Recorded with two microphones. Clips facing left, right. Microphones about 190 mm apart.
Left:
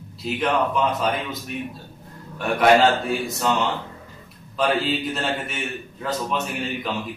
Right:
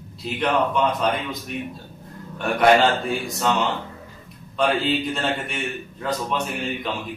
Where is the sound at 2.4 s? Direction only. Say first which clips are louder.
Even; centre (ahead or behind).